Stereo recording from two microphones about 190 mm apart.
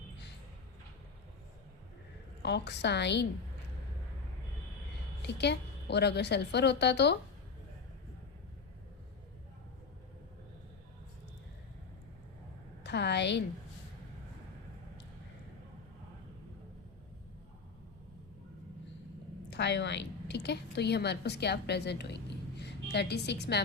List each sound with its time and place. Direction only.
2.4 s a woman's voice: 65° left (ahead or behind)
5.2 s a woman's voice: 60° left (ahead or behind)
12.8 s a sound: 65° left (ahead or behind)
19.5 s a woman's voice: 65° left (ahead or behind)